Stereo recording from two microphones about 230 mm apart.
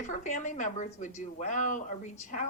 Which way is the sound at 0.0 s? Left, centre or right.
Left.